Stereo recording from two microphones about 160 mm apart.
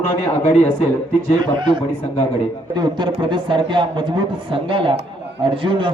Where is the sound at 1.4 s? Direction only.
30° right (ahead or behind).